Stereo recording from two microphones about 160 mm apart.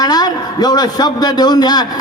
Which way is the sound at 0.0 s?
25° left (ahead or behind).